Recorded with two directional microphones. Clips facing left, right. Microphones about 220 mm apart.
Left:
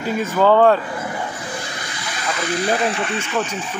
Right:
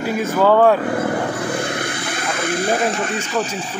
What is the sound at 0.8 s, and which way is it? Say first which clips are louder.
Vehicle: right 7 dB; 65° right (ahead or behind).